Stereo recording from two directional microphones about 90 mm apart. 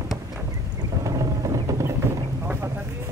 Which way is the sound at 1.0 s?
40° right (ahead or behind).